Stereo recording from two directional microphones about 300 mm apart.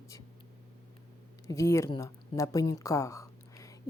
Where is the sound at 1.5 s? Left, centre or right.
Centre.